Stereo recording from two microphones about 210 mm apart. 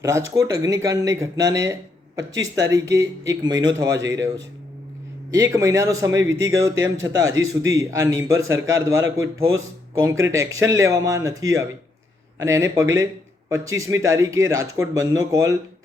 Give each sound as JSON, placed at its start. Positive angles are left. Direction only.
{"t": 0.0, "sound": "speech", "side_deg": -15}
{"t": 2.7, "sound": "speech", "side_deg": -15}
{"t": 5.4, "sound": "speech", "side_deg": -15}
{"t": 6.2, "sound": "speech", "side_deg": -65}
{"t": 6.5, "sound": "speech", "side_deg": -15}